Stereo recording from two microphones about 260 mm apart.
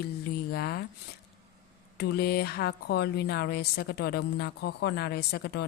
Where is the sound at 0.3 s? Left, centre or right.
Left.